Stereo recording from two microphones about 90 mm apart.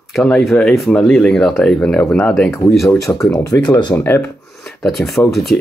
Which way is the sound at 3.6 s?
50° left (ahead or behind).